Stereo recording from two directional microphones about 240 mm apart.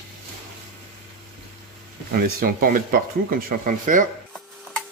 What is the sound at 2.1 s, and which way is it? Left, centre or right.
Speech, right.